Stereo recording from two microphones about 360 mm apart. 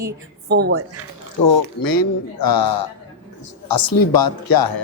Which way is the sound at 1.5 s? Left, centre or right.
Left.